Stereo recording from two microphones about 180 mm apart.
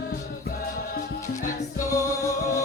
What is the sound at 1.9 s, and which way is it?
Music, 15° left (ahead or behind).